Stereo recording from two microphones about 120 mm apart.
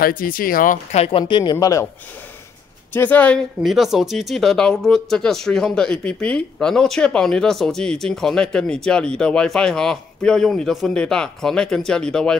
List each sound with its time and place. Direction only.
0.7 s speech: 60° left (ahead or behind)
1.2 s speech: 40° left (ahead or behind)
2.9 s speech: 15° left (ahead or behind)
3.6 s speech: centre (ahead or behind)